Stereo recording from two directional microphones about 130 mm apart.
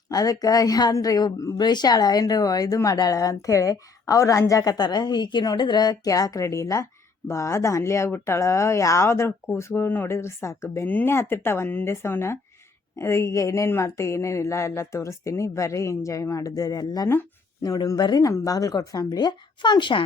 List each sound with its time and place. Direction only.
0.1 s a woman's voice: 25° left (ahead or behind)